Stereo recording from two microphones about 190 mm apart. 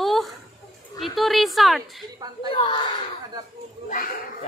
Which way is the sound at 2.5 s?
25° left (ahead or behind).